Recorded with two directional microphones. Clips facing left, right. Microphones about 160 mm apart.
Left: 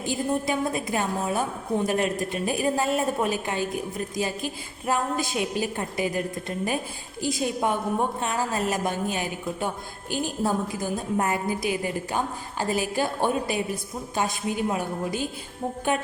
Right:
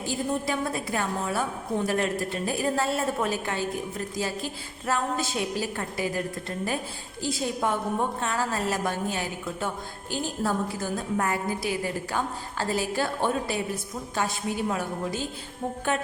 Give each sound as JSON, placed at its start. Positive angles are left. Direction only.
{"t": 0.0, "sound": "a woman's voice", "side_deg": 15}
{"t": 15.9, "sound": "music", "side_deg": 15}